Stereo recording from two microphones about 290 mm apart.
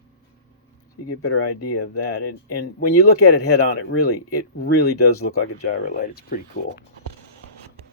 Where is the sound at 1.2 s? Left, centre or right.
Left.